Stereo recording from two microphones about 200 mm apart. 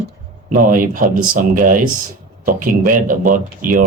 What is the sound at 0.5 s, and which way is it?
Speech, 40° right (ahead or behind).